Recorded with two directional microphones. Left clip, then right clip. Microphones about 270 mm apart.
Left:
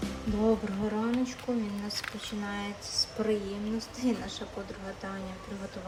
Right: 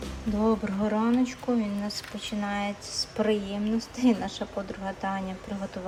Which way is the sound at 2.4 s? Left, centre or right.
Centre.